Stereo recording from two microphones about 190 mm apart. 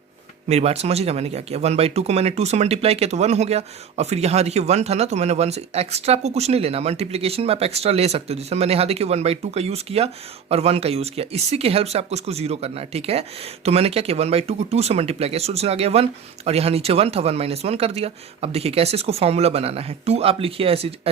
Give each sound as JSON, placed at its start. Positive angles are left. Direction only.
{"t": 0.4, "sound": "speech", "side_deg": -35}